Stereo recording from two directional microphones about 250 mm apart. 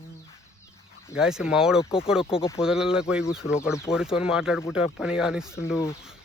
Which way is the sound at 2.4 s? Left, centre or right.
Centre.